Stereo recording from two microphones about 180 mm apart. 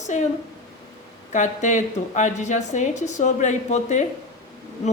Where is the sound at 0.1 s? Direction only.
40° left (ahead or behind).